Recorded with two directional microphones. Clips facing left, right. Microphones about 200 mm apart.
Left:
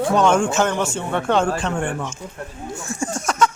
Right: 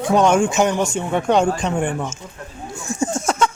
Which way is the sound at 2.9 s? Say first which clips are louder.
Right 2 dB; 20° right (ahead or behind).